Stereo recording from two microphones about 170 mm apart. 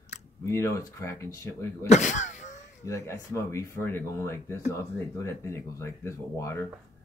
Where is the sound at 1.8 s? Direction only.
45° left (ahead or behind).